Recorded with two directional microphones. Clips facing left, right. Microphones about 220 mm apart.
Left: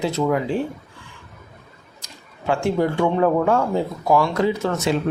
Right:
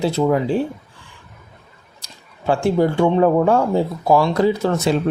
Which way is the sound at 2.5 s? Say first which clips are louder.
Right 3 dB; 35° right (ahead or behind).